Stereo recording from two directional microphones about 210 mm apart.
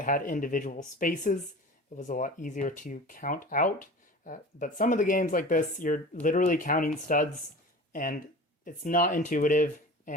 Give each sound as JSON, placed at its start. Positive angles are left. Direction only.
{"t": 0.0, "sound": "speech", "side_deg": 40}